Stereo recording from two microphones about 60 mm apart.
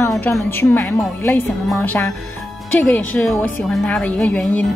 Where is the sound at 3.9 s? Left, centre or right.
Centre.